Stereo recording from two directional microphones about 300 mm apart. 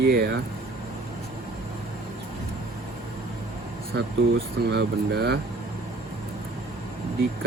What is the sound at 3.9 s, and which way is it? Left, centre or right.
Speech, right.